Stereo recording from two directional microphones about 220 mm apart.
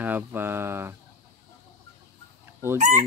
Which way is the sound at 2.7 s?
35° right (ahead or behind).